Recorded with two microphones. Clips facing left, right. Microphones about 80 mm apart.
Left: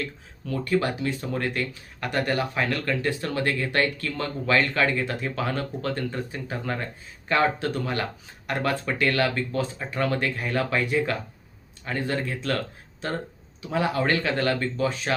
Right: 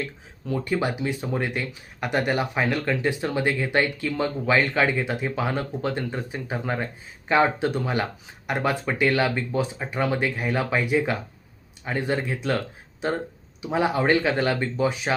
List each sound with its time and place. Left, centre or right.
0.0 s speech: centre